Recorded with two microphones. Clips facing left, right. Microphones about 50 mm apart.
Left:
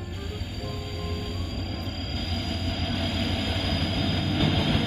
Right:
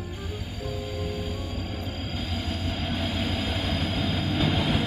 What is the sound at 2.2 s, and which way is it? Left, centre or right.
Train, centre.